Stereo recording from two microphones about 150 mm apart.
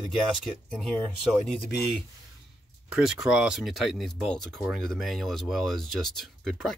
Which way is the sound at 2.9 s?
5° right (ahead or behind).